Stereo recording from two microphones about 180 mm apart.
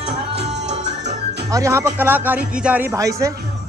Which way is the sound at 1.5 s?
15° right (ahead or behind).